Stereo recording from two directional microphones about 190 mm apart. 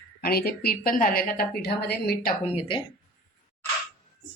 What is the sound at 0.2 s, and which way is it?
A woman's voice, 55° left (ahead or behind).